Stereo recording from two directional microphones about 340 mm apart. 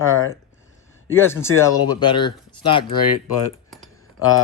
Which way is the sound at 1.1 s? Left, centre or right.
Centre.